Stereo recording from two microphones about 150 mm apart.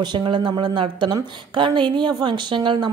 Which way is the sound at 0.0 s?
30° right (ahead or behind).